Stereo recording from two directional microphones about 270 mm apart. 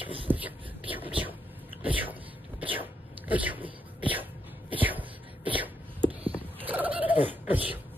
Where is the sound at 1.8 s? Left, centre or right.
Centre.